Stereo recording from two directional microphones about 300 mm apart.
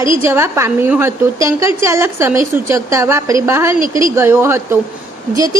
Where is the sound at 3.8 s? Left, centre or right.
Right.